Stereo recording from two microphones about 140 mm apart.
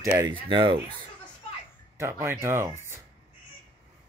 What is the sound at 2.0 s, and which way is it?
Speech, 15° right (ahead or behind).